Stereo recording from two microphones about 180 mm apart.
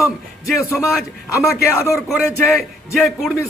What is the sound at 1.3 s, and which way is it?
Speech, 15° left (ahead or behind).